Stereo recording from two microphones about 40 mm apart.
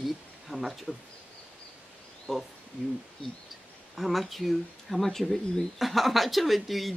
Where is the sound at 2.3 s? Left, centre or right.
Centre.